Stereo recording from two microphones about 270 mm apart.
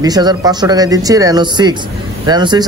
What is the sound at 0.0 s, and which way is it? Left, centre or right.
A man's voice, centre.